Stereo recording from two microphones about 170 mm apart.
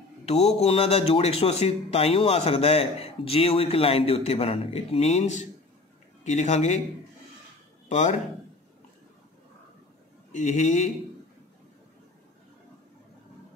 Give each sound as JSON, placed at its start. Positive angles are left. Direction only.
{"t": 0.2, "sound": "a man's voice", "side_deg": 40}
{"t": 7.9, "sound": "speech", "side_deg": 45}
{"t": 10.3, "sound": "speech", "side_deg": 45}